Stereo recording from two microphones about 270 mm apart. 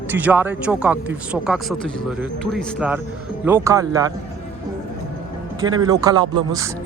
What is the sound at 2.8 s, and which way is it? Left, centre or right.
Speech, centre.